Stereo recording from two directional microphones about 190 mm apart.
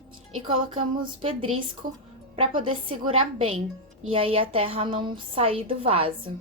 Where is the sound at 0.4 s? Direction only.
30° right (ahead or behind).